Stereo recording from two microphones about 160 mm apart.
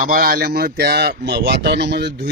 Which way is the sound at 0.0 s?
65° right (ahead or behind).